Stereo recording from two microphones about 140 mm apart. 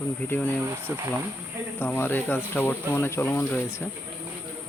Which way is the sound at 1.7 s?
15° left (ahead or behind).